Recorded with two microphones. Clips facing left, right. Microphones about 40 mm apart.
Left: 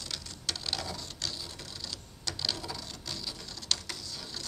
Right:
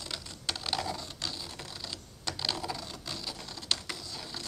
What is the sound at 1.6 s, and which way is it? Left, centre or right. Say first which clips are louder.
Mechanisms: right 1 dB; centre.